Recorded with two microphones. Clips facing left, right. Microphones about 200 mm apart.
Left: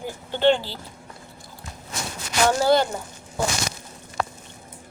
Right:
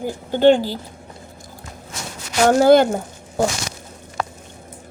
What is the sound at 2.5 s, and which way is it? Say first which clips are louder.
Speech: right 8 dB; 50° right (ahead or behind).